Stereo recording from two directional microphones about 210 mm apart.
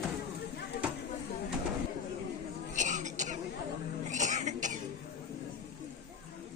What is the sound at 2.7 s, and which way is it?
Throat clearing, 35° right (ahead or behind).